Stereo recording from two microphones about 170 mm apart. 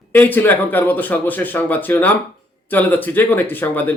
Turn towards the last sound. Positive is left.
turn(degrees=10)  # may be behind; listen again after turning